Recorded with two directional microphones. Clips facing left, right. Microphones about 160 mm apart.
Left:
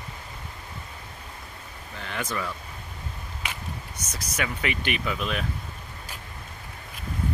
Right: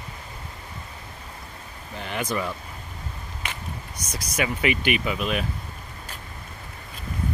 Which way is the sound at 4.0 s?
10° right (ahead or behind).